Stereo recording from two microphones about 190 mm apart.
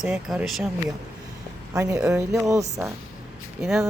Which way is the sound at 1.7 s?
15° right (ahead or behind).